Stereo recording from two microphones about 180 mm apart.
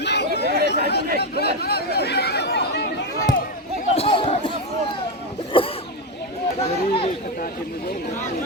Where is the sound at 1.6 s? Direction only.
60° left (ahead or behind).